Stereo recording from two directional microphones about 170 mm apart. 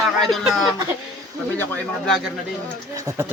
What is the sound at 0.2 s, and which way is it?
Speech, centre (ahead or behind).